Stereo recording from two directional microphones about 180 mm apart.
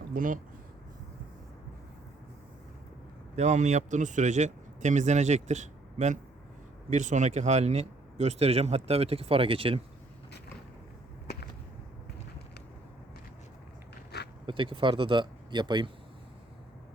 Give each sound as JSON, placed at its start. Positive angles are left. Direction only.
{"t": 0.1, "sound": "speech", "side_deg": -50}
{"t": 3.3, "sound": "speech", "side_deg": -40}
{"t": 14.4, "sound": "speech", "side_deg": -25}